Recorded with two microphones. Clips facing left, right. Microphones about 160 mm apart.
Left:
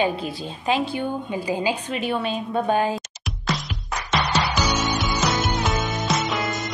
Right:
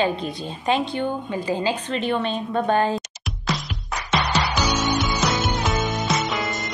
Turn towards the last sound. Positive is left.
turn(degrees=0)  # may be behind; listen again after turning